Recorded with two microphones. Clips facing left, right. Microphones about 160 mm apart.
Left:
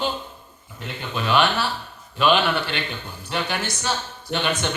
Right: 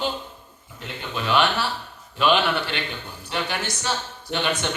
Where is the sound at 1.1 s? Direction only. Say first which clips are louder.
Left 1 dB; 50° left (ahead or behind).